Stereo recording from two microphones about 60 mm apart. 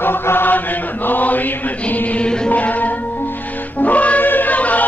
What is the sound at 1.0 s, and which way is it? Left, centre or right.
Music, left.